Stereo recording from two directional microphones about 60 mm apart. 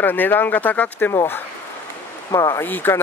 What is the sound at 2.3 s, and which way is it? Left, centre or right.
Speech, left.